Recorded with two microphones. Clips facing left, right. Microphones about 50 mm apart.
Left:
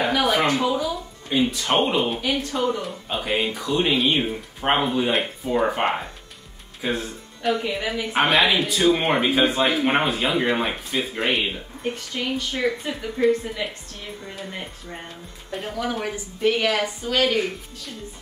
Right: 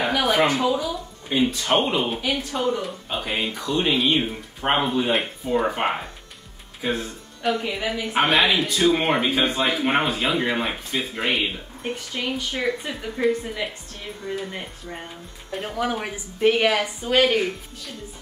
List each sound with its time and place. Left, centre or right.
0.0 s a sound: centre
0.5 s speech: centre
1.7 s speech: centre; by 17.4 s right